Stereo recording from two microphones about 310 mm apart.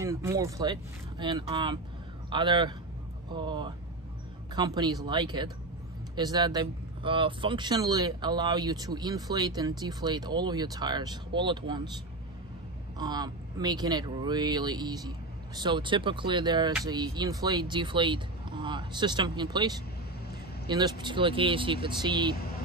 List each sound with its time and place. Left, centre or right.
0.0 s a man's voice: centre
12.9 s speech: centre